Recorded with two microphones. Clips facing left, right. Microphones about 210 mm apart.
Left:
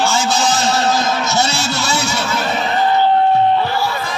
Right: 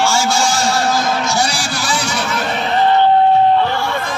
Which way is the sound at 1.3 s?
25° left (ahead or behind).